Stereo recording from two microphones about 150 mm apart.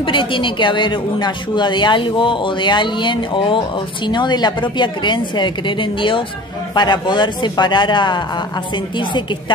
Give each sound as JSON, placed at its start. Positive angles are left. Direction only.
{"t": 0.0, "sound": "speech", "side_deg": 35}